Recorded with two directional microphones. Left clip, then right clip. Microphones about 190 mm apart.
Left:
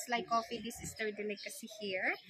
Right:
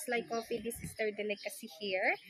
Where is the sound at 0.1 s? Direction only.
15° left (ahead or behind).